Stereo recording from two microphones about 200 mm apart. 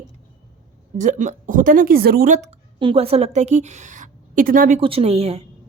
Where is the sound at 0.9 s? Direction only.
35° right (ahead or behind).